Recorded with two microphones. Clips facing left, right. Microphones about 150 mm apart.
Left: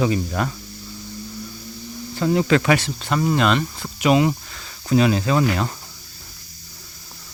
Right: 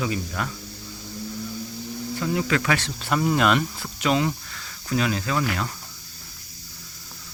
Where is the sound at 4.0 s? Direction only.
15° left (ahead or behind).